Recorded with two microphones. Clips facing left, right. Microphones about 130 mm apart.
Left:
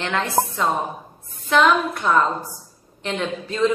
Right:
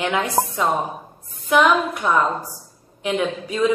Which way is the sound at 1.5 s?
10° right (ahead or behind).